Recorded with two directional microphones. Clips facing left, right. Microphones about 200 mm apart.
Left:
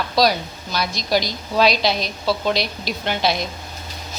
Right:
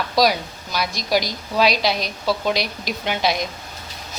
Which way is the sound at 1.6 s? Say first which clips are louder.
Left 1 dB; 5° right (ahead or behind).